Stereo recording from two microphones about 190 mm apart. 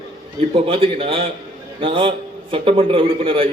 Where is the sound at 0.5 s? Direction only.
30° right (ahead or behind).